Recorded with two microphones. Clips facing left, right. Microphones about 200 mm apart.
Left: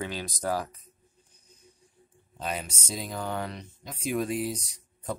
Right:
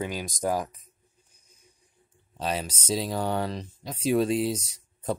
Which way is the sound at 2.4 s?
30° right (ahead or behind).